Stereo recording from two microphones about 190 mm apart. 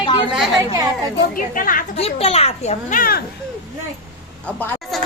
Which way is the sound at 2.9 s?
50° left (ahead or behind).